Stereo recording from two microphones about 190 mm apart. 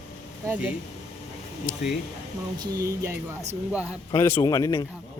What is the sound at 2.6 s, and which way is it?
Speech, 20° right (ahead or behind).